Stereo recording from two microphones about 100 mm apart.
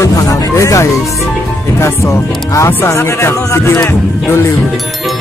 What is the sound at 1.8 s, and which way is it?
Speech, 30° left (ahead or behind).